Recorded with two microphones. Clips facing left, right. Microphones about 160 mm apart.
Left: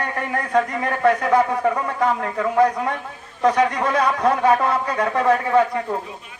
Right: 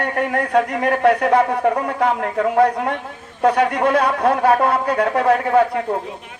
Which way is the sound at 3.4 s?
55° right (ahead or behind).